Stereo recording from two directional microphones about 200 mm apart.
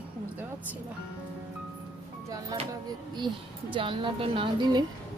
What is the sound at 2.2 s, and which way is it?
A woman's voice, 15° right (ahead or behind).